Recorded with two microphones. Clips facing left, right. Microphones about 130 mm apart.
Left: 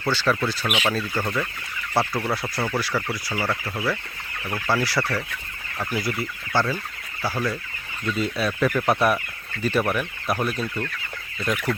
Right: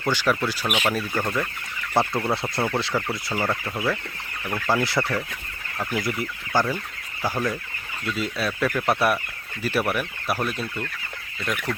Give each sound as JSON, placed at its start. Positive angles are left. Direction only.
{"t": 0.0, "sound": "speech", "side_deg": -15}
{"t": 8.0, "sound": "speech", "side_deg": 0}